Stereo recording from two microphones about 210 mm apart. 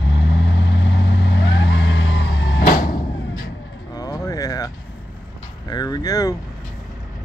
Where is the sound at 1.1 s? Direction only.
55° left (ahead or behind).